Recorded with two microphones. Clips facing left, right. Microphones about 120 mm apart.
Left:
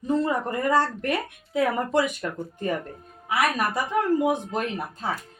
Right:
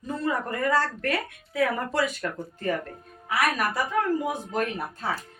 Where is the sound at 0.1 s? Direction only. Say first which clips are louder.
Left 4 dB; 20° left (ahead or behind).